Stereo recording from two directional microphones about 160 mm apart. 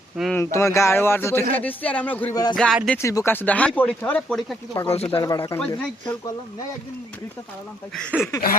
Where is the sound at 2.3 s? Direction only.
25° left (ahead or behind).